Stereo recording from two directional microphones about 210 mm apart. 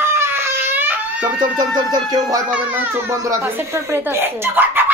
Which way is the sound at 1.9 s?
20° right (ahead or behind).